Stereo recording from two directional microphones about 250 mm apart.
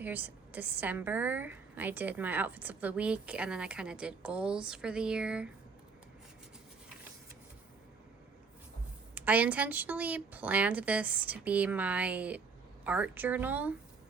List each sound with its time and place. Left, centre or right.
0.0 s a woman's voice: centre
9.1 s a woman's voice: centre